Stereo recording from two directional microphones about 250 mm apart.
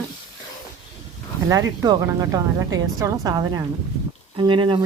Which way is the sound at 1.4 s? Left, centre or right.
Centre.